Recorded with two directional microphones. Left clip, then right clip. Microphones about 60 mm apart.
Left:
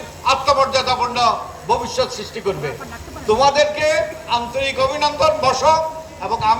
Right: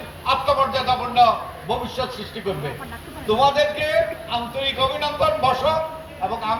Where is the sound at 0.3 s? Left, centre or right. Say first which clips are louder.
Left 4 dB; left.